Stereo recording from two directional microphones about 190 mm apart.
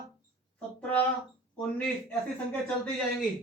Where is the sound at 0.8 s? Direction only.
10° left (ahead or behind).